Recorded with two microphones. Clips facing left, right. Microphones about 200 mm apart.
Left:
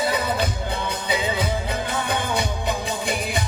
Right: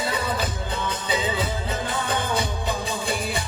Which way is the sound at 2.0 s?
15° left (ahead or behind).